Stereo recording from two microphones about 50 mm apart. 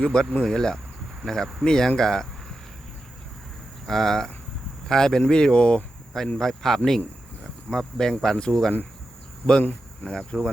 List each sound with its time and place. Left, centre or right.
0.0 s speech: centre
2.0 s a sound: centre
3.8 s speech: centre
6.1 s speech: centre
10.3 s speech: centre